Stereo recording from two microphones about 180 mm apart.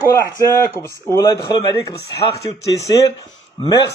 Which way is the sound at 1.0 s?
15° left (ahead or behind).